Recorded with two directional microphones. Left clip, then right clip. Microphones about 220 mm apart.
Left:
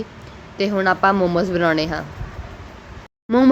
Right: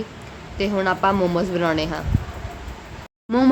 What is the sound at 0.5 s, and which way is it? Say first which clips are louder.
A woman's voice: left 3 dB; 15° left (ahead or behind).